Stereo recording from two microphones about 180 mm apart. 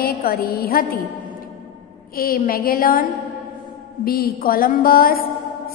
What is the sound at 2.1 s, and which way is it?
A woman's voice, 55° left (ahead or behind).